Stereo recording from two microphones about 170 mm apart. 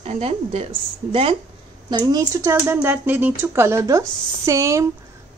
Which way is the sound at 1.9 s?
25° right (ahead or behind).